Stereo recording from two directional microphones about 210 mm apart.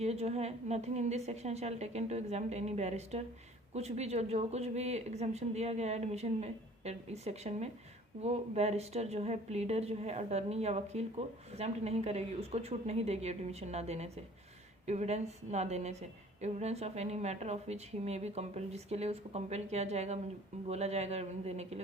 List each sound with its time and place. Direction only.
0.0 s a woman's voice: 30° right (ahead or behind)